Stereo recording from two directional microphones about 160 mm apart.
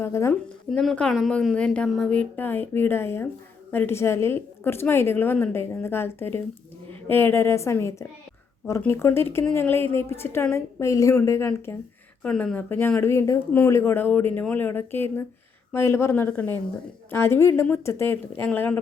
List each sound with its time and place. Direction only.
0.0 s a woman's voice: 15° left (ahead or behind)
0.7 s a woman's voice: centre (ahead or behind)